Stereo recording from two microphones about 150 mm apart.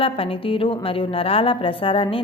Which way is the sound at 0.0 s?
40° left (ahead or behind).